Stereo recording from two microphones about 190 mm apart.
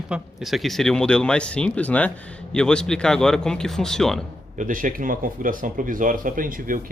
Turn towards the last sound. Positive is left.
turn(degrees=-45)  # may be behind; listen again after turning